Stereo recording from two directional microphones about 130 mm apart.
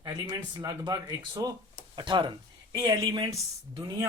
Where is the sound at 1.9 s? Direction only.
40° right (ahead or behind).